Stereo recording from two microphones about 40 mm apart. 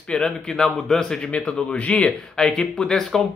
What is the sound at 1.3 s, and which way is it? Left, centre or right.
Speech, left.